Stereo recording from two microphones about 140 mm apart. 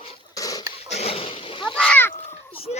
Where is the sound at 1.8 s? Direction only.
10° left (ahead or behind).